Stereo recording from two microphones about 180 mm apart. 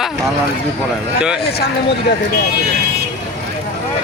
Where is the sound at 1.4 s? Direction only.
65° left (ahead or behind).